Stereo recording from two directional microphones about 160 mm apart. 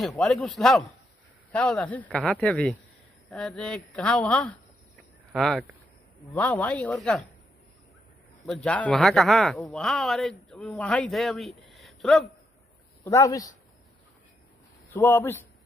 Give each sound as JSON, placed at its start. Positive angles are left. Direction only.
{"t": 0.0, "sound": "a man's voice", "side_deg": 0}
{"t": 8.6, "sound": "speech", "side_deg": 10}
{"t": 13.0, "sound": "a man's voice", "side_deg": 20}
{"t": 14.9, "sound": "a man's voice", "side_deg": 15}